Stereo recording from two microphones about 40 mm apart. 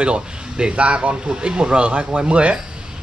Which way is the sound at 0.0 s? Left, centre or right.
Right.